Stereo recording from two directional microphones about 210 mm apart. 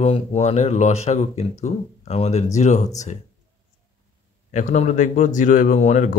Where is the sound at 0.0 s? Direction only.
30° left (ahead or behind).